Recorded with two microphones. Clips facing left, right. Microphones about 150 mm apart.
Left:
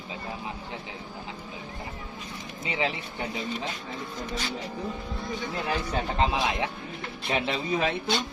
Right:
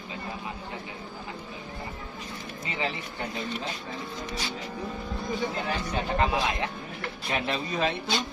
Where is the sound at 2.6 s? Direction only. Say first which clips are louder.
Left 3 dB; 15° left (ahead or behind).